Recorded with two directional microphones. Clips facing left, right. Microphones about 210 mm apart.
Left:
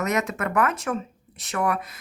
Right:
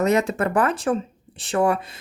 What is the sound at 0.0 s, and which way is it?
Speech, 30° right (ahead or behind).